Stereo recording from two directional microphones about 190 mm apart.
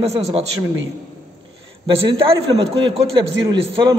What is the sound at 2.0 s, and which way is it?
A woman's voice, 25° right (ahead or behind).